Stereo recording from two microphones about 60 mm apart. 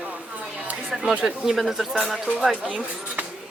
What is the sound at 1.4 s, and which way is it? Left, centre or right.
Speech, centre.